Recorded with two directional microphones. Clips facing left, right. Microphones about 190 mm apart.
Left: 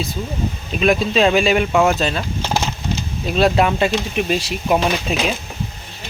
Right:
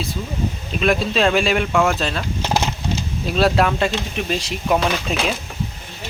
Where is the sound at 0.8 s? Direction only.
Centre (ahead or behind).